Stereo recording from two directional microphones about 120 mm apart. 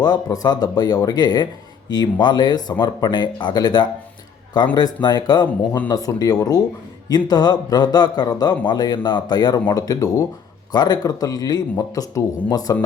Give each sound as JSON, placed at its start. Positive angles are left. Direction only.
{"t": 0.0, "sound": "a man's voice", "side_deg": 35}